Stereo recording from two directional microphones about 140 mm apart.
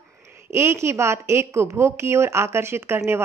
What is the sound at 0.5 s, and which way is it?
A woman's voice, 20° right (ahead or behind).